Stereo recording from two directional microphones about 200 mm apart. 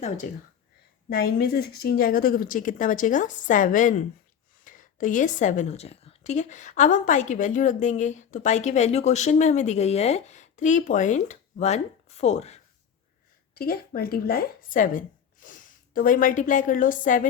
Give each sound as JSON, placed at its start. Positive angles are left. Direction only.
{"t": 1.1, "sound": "a woman's voice", "side_deg": 50}
{"t": 13.5, "sound": "speech", "side_deg": 50}